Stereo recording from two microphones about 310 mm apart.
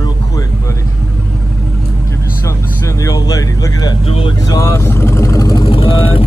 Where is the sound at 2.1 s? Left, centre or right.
Centre.